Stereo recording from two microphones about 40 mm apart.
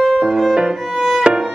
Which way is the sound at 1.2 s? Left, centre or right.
Centre.